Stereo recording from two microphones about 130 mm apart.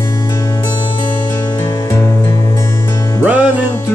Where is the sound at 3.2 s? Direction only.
10° right (ahead or behind).